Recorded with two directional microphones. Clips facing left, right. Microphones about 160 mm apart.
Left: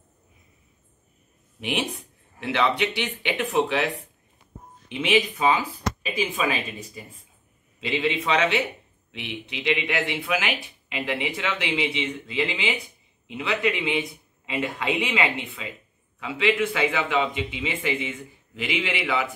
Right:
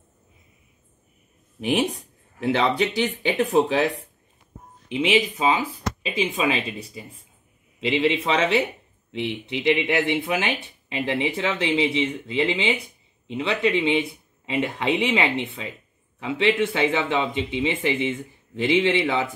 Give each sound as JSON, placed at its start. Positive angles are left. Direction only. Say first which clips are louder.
{"t": 2.4, "sound": "speech", "louder": "right 2 dB", "side_deg": -35}
{"t": 4.8, "sound": "speech", "louder": "right 2 dB", "side_deg": -20}